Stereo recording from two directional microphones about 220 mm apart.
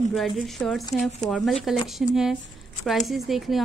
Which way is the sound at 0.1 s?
Centre (ahead or behind).